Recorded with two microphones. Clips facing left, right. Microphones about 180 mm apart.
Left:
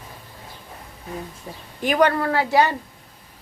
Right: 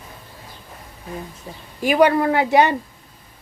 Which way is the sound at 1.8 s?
10° right (ahead or behind).